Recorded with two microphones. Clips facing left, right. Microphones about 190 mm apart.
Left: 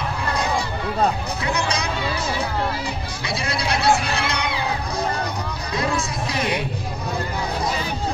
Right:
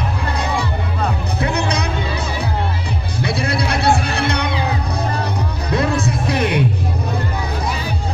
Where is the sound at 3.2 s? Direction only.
60° right (ahead or behind).